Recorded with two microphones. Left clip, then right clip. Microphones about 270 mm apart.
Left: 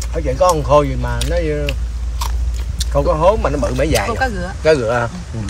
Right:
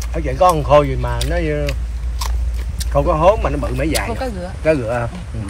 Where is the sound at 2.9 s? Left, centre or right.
Left.